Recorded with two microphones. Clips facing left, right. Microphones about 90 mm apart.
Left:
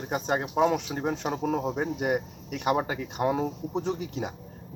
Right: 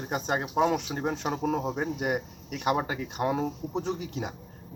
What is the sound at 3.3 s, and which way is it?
Speech, 5° left (ahead or behind).